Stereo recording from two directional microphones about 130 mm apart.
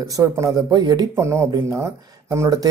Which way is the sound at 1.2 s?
20° right (ahead or behind).